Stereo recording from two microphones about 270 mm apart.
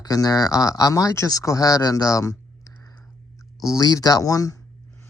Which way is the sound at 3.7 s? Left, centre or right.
Centre.